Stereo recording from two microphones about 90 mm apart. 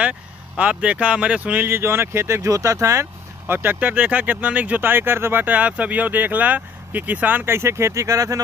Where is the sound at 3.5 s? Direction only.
25° right (ahead or behind).